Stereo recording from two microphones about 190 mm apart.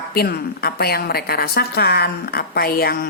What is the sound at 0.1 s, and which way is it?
A woman's voice, 55° left (ahead or behind).